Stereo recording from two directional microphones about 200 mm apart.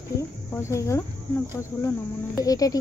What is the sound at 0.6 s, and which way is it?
Speech, 15° left (ahead or behind).